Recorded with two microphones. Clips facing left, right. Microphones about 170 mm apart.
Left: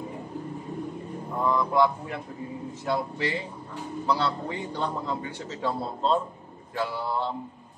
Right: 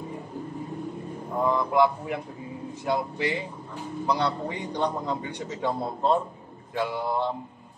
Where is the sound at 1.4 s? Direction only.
15° right (ahead or behind).